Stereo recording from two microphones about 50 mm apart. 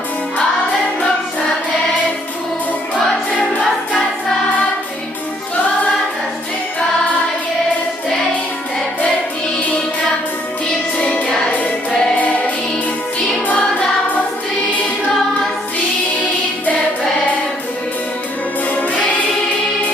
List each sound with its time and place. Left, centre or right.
10.9 s music: left
18.6 s music: left